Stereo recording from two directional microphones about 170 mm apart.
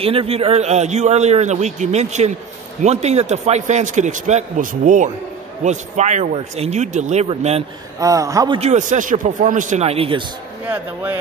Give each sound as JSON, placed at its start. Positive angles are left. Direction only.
{"t": 0.0, "sound": "a man's voice", "side_deg": -35}
{"t": 8.0, "sound": "speech", "side_deg": -20}
{"t": 8.5, "sound": "a man's voice", "side_deg": -45}
{"t": 10.6, "sound": "speech", "side_deg": -10}